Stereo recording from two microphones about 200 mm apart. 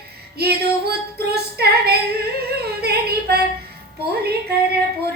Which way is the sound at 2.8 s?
50° right (ahead or behind).